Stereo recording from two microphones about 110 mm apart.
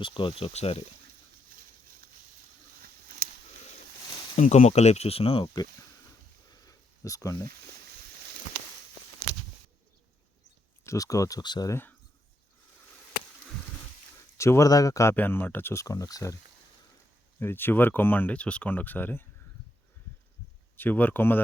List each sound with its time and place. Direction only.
0.0 s speech: 50° left (ahead or behind); by 0.8 s 65° left (ahead or behind)
4.4 s speech: 90° left; by 5.5 s 60° left (ahead or behind)
6.5 s a sound: 30° left (ahead or behind)
10.8 s speech: 30° left (ahead or behind)
11.7 s speech: 20° left (ahead or behind)
14.3 s speech: 25° left (ahead or behind)
15.1 s speech: 15° left (ahead or behind); by 16.4 s 30° left (ahead or behind)
17.4 s speech: 20° left (ahead or behind)
20.7 s speech: 15° left (ahead or behind)